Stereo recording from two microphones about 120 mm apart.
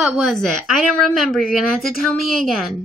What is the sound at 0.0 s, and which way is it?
A woman's voice, centre (ahead or behind).